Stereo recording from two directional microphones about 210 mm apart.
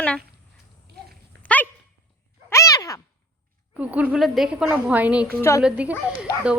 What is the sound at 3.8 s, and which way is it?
A woman's voice, 5° right (ahead or behind).